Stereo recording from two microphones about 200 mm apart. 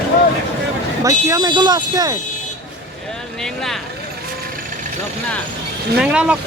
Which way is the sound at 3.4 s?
Centre (ahead or behind).